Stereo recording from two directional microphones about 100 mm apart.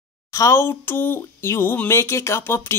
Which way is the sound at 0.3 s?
30° left (ahead or behind).